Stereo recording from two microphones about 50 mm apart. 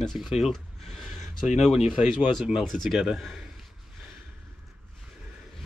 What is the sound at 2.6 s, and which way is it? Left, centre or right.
Speech, centre.